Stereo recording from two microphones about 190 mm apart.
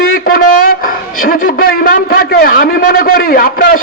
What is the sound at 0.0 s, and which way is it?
A man's voice, 50° left (ahead or behind).